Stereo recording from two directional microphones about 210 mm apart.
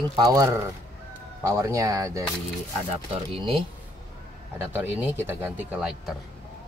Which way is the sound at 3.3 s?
25° right (ahead or behind).